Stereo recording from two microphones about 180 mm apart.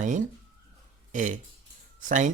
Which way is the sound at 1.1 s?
45° right (ahead or behind).